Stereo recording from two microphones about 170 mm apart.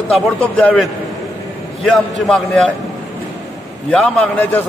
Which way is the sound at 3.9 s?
5° left (ahead or behind).